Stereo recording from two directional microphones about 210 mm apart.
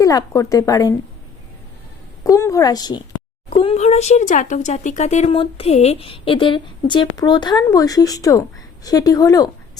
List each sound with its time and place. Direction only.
0.0 s speech: 15° left (ahead or behind)
2.2 s speech: 15° left (ahead or behind)